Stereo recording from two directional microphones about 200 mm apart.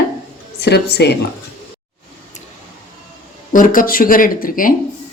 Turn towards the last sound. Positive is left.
turn(degrees=45)  # may be behind; listen again after turning